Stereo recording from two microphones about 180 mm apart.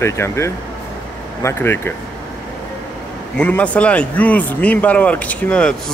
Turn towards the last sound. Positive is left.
turn(degrees=5)  # may be behind; listen again after turning